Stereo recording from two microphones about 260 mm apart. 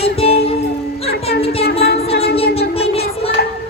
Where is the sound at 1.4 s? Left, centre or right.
Left.